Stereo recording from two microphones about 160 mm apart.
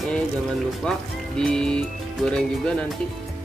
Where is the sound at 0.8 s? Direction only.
5° left (ahead or behind).